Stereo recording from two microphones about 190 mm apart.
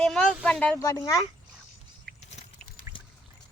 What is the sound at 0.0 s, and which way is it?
A woman's voice, 5° left (ahead or behind).